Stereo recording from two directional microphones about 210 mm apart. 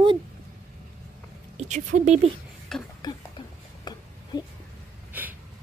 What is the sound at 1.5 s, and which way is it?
Speech, 35° right (ahead or behind).